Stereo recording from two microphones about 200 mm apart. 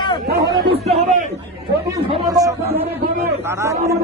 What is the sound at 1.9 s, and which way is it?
Speech, 20° right (ahead or behind).